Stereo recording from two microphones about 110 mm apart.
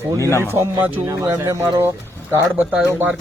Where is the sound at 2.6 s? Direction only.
5° right (ahead or behind).